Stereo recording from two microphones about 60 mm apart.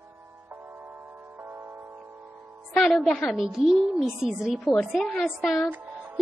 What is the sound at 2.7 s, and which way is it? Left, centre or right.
Speech, centre.